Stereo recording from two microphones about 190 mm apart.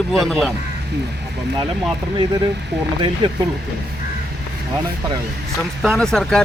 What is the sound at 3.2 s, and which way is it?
Speech, 25° right (ahead or behind).